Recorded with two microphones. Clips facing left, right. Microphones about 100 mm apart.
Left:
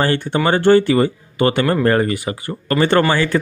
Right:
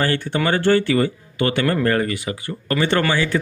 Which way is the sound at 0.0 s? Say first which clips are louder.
Left 3 dB; 30° left (ahead or behind).